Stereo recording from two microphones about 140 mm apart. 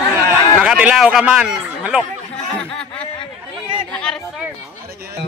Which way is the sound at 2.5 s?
5° left (ahead or behind).